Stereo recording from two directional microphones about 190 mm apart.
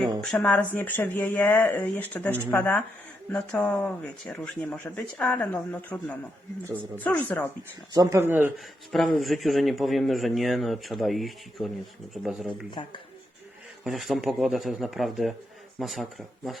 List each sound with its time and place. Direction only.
0.2 s speech: 5° left (ahead or behind)
6.7 s speech: 10° right (ahead or behind)
7.0 s speech: 10° left (ahead or behind)
7.9 s speech: 15° right (ahead or behind)
12.8 s speech: 30° left (ahead or behind)
13.8 s speech: centre (ahead or behind)